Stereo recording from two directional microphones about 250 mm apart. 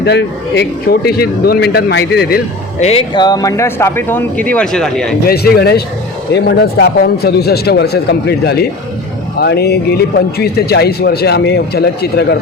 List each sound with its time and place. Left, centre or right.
0.0 s a man's voice: left
2.8 s speech: left; by 5.1 s centre
5.3 s a man's voice: left